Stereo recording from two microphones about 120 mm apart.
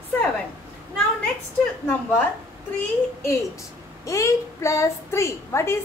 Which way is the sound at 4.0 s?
25° left (ahead or behind).